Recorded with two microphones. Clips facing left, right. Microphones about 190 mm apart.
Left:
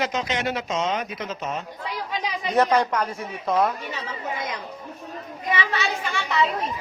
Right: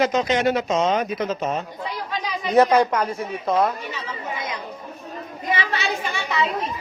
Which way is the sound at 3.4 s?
10° right (ahead or behind).